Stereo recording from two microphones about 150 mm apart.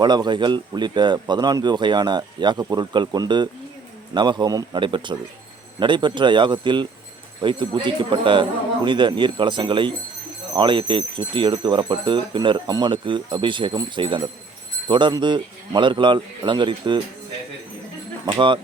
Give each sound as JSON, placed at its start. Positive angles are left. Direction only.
{"t": 0.0, "sound": "speech", "side_deg": -30}
{"t": 18.3, "sound": "speech", "side_deg": -35}